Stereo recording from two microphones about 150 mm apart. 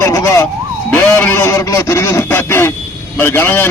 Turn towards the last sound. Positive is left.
turn(degrees=15)  # may be behind; listen again after turning